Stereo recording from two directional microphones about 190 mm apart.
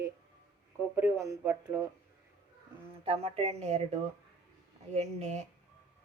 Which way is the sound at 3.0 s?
30° right (ahead or behind).